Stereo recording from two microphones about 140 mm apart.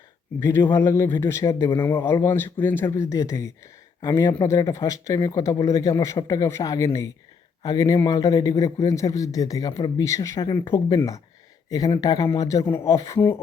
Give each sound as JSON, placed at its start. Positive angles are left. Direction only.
{"t": 0.3, "sound": "speech", "side_deg": 25}
{"t": 10.4, "sound": "speech", "side_deg": 30}